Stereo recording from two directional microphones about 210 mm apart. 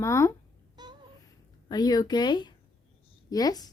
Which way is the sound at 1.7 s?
20° left (ahead or behind).